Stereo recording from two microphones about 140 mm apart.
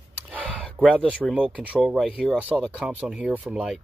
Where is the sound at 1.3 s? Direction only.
5° right (ahead or behind).